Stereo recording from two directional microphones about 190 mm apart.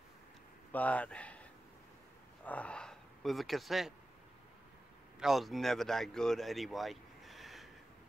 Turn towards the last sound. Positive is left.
turn(degrees=0)  # may be behind; listen again after turning